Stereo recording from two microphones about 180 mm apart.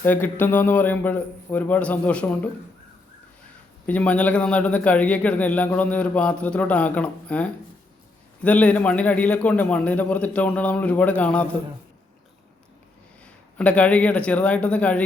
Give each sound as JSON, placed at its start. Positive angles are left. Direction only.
{"t": 0.0, "sound": "a man's voice", "side_deg": 10}
{"t": 3.8, "sound": "a man's voice", "side_deg": 10}
{"t": 13.6, "sound": "a man's voice", "side_deg": 5}